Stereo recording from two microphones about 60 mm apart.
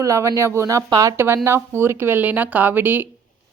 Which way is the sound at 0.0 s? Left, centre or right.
Right.